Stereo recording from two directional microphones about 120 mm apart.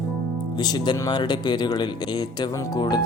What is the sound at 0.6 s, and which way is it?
Speech, 35° left (ahead or behind).